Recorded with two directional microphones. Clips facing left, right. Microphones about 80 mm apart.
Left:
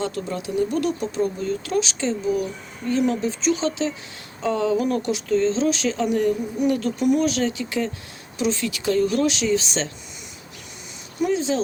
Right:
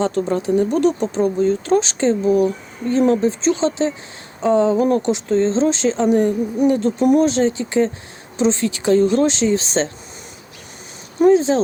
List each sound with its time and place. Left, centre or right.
0.0 s speech: right
11.2 s speech: right